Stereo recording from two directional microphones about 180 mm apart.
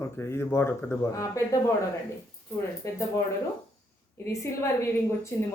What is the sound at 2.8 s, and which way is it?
Speech, 15° left (ahead or behind).